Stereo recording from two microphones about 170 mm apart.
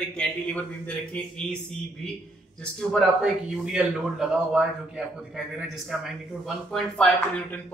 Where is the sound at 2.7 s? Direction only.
Centre (ahead or behind).